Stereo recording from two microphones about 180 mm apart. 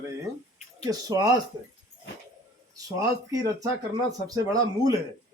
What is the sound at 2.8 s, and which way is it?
Speech, 20° right (ahead or behind).